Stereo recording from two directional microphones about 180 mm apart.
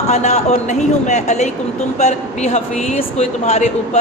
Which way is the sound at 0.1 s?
40° left (ahead or behind).